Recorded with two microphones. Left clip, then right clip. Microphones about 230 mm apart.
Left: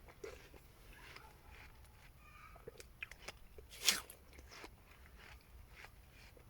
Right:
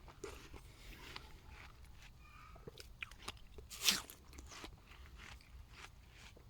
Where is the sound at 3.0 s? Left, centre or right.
Right.